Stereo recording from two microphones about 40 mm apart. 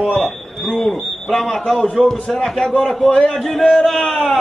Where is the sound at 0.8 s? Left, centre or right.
Centre.